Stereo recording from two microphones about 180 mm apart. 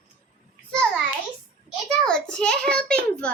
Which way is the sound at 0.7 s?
5° left (ahead or behind).